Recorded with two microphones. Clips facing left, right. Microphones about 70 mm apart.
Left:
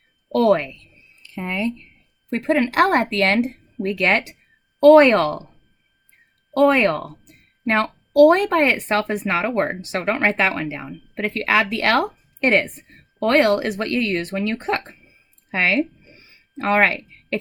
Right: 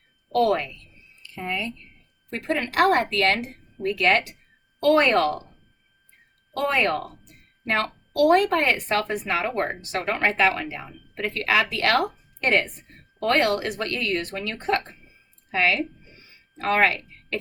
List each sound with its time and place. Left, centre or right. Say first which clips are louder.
0.4 s a woman's voice: left 6 dB; left
6.6 s speech: left 7 dB; left